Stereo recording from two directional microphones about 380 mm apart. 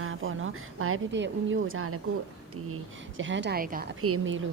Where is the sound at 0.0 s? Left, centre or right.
Right.